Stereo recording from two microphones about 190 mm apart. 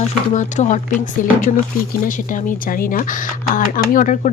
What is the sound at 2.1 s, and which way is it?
Speech, 45° left (ahead or behind).